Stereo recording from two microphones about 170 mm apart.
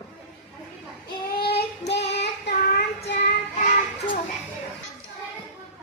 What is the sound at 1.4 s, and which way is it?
Child singing, 70° left (ahead or behind).